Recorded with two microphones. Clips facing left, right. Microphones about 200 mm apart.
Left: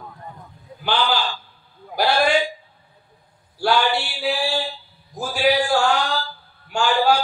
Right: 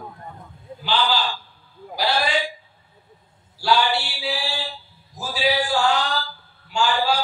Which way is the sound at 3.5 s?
55° left (ahead or behind).